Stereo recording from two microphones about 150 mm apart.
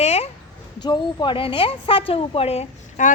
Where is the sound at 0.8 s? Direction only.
30° left (ahead or behind).